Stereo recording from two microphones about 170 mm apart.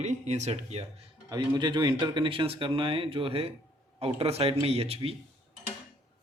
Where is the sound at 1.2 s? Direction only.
25° right (ahead or behind).